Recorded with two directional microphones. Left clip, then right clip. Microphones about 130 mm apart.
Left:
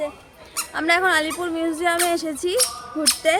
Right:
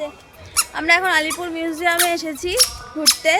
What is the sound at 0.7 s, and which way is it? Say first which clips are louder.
Speech: right 2 dB; 35° left (ahead or behind).